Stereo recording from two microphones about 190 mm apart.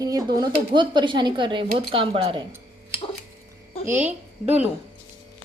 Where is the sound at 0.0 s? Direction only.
20° right (ahead or behind).